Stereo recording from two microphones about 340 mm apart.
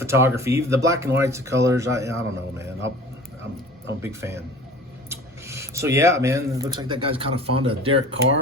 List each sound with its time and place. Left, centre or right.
0.0 s speech: centre
4.0 s speech: centre